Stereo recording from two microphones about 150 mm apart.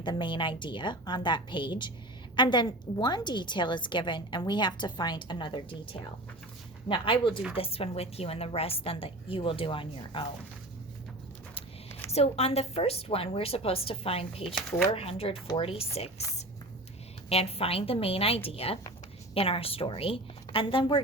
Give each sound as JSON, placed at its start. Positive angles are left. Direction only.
{"t": 0.0, "sound": "a woman's voice", "side_deg": 30}
{"t": 11.9, "sound": "a sound", "side_deg": 15}
{"t": 12.1, "sound": "a woman's voice", "side_deg": 45}
{"t": 14.4, "sound": "speech", "side_deg": 0}
{"t": 14.8, "sound": "a woman's voice", "side_deg": 40}
{"t": 17.2, "sound": "a woman's voice", "side_deg": 40}